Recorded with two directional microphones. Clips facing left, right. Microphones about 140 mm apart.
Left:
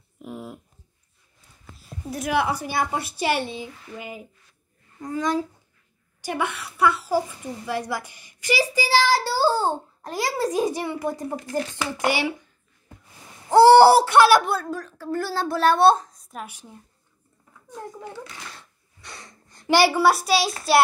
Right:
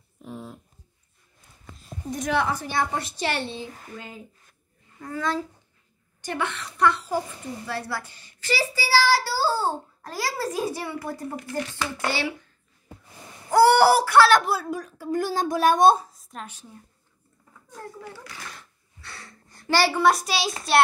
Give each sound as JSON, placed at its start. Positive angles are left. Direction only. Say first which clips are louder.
{"t": 0.2, "sound": "a sound", "louder": "left 2 dB", "side_deg": 5}
{"t": 1.8, "sound": "a woman's voice", "louder": "even", "side_deg": 5}
{"t": 13.5, "sound": "a child's voice", "louder": "left 5 dB", "side_deg": 25}
{"t": 14.4, "sound": "a woman's voice", "louder": "left 1 dB", "side_deg": -5}
{"t": 18.0, "sound": "a child's voice", "louder": "left 3 dB", "side_deg": 20}